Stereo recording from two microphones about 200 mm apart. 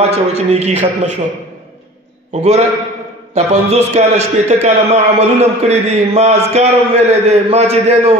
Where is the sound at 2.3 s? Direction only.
35° right (ahead or behind).